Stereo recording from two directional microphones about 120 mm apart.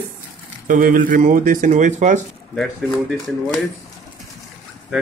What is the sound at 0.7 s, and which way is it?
Speech, 90° right.